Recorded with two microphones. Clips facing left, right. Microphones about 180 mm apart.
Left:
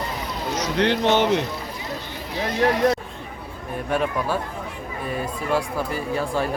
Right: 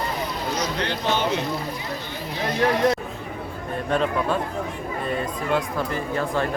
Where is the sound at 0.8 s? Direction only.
70° left (ahead or behind).